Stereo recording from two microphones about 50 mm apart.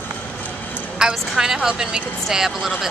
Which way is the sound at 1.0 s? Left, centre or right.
Centre.